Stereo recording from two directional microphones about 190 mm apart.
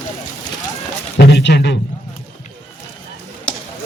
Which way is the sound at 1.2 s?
60° left (ahead or behind).